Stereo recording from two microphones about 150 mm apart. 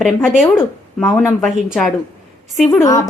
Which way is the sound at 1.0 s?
15° left (ahead or behind).